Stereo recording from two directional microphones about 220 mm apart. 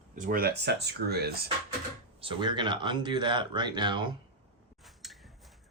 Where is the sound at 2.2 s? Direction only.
20° right (ahead or behind).